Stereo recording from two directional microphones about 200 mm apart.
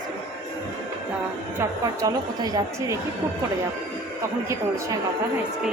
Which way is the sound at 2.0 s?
20° right (ahead or behind).